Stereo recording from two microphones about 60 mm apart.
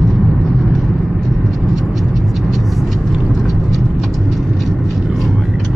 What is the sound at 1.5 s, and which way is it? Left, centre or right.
Vehicle, centre.